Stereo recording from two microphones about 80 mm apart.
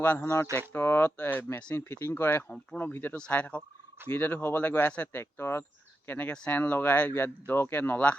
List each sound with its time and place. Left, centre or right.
0.2 s speech: left; by 6.6 s centre
6.6 s speech: left